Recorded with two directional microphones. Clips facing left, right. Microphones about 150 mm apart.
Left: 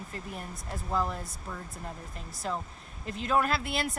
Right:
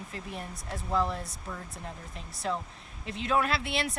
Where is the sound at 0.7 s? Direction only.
5° left (ahead or behind).